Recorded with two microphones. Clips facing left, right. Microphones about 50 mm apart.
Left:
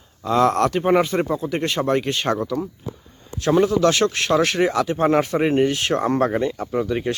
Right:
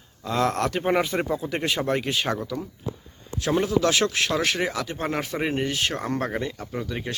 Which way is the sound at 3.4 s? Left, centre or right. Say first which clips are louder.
Left 5 dB; centre.